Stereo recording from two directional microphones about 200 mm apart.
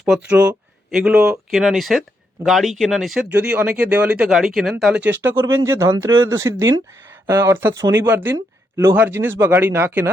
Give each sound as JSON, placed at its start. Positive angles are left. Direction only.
{"t": 0.3, "sound": "speech", "side_deg": -5}